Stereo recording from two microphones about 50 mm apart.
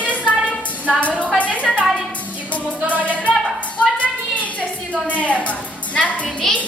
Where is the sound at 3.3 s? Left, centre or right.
Left.